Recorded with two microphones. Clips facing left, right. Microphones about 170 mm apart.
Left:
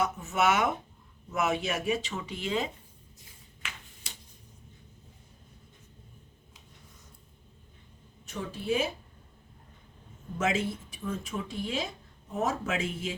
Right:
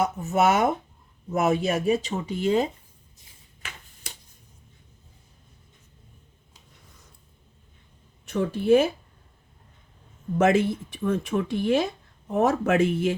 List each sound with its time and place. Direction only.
0.0 s speech: 40° right (ahead or behind)
3.6 s finger snapping: 50° right (ahead or behind)
8.2 s speech: 60° right (ahead or behind)
10.3 s speech: 60° right (ahead or behind)